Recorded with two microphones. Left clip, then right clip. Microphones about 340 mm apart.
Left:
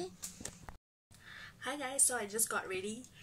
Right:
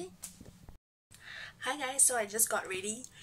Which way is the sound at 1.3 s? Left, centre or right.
Centre.